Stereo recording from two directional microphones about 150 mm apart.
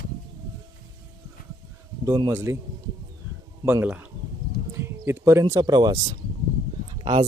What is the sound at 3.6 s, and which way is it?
Speech, 15° right (ahead or behind).